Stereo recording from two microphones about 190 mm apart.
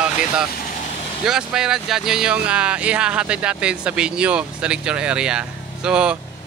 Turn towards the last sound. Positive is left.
turn(degrees=-5)  # may be behind; listen again after turning